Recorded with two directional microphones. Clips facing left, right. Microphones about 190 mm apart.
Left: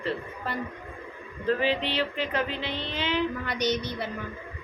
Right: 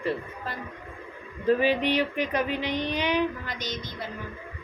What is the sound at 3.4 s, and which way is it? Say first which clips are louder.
Speech: left 7 dB; 70° left (ahead or behind).